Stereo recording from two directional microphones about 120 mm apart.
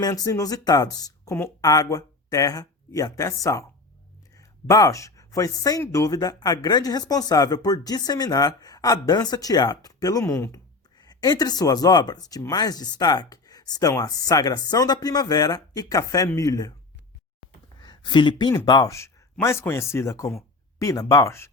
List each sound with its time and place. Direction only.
0.0 s speech: 25° left (ahead or behind)
11.0 s speech: 35° left (ahead or behind)
17.8 s speech: 40° left (ahead or behind); by 21.5 s 20° left (ahead or behind)